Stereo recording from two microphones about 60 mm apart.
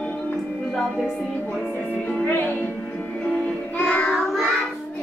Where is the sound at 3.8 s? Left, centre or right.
Left.